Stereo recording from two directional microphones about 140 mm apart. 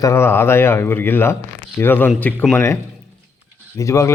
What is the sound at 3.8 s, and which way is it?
Speech, 20° left (ahead or behind).